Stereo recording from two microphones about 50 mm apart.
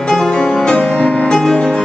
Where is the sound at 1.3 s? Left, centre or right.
Centre.